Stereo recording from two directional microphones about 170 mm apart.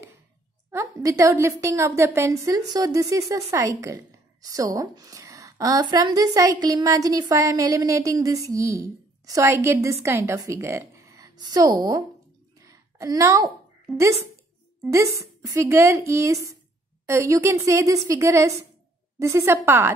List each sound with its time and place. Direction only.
0.7 s a woman's voice: 15° right (ahead or behind)
12.5 s a sound: 20° right (ahead or behind)
14.9 s a woman's voice: 20° right (ahead or behind)